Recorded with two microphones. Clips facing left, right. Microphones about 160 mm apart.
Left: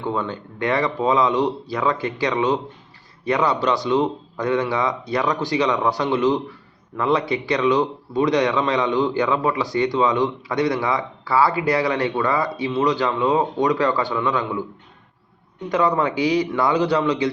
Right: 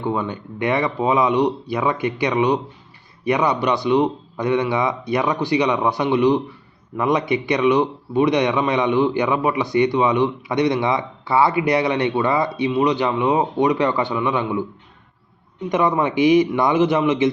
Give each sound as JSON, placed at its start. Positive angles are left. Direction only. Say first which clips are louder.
{"t": 0.0, "sound": "a man's voice", "louder": "right 2 dB", "side_deg": -15}
{"t": 15.7, "sound": "a man's voice", "louder": "right 1 dB", "side_deg": -20}